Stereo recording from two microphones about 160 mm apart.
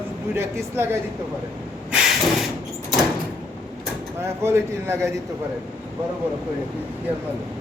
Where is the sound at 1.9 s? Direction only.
Centre (ahead or behind).